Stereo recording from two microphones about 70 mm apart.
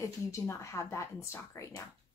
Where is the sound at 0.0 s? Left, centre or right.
Left.